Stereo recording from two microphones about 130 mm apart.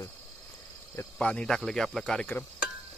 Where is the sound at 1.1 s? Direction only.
5° left (ahead or behind).